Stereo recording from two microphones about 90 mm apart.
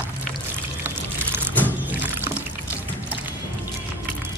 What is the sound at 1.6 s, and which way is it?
Pour, 20° right (ahead or behind).